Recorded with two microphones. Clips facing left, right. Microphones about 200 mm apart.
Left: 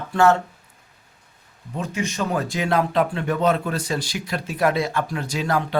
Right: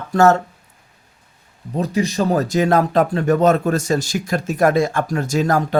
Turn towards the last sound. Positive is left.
turn(degrees=-45)  # may be behind; listen again after turning